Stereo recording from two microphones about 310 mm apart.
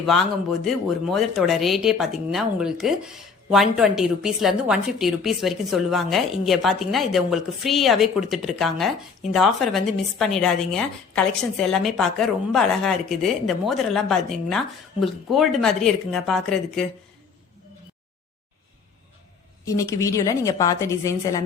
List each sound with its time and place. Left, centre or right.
0.0 s speech: centre
19.6 s a woman's voice: centre